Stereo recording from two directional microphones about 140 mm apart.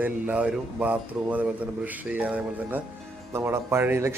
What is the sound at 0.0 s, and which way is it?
A man's voice, 10° right (ahead or behind).